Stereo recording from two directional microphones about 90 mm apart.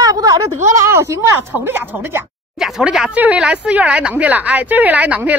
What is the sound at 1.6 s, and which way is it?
Speech, 25° right (ahead or behind).